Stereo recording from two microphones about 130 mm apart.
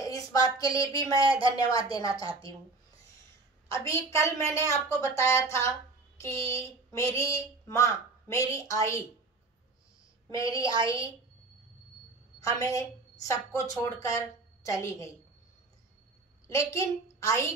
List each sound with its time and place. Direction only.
0.0 s a woman's voice: 25° left (ahead or behind)
3.7 s a woman's voice: 25° left (ahead or behind)
10.3 s a woman's voice: 25° left (ahead or behind)
10.6 s a woman's voice: 40° right (ahead or behind)
12.4 s a woman's voice: 25° left (ahead or behind)
16.4 s a woman's voice: 25° left (ahead or behind)